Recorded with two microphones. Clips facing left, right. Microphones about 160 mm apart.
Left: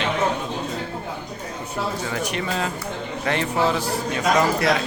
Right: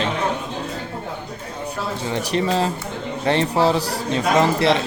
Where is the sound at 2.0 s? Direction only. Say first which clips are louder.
Right 5 dB; 30° right (ahead or behind).